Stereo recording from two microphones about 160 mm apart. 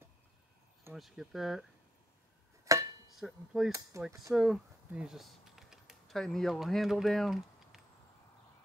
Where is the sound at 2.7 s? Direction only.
20° right (ahead or behind).